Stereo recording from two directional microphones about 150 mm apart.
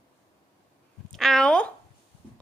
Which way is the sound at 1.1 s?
Centre (ahead or behind).